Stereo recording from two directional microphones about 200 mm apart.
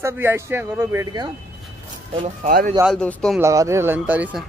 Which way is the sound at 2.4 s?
40° right (ahead or behind).